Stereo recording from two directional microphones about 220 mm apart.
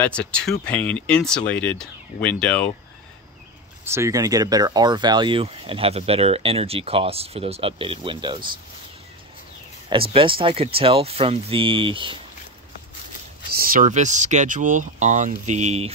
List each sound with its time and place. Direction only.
0.0 s speech: 5° left (ahead or behind)
3.8 s speech: 10° right (ahead or behind)
10.1 s speech: 25° right (ahead or behind)
13.5 s speech: 40° right (ahead or behind)